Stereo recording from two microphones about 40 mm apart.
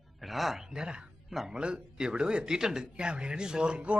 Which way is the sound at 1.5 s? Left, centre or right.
Right.